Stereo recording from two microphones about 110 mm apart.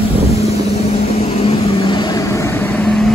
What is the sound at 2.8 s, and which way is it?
Vehicle, 5° left (ahead or behind).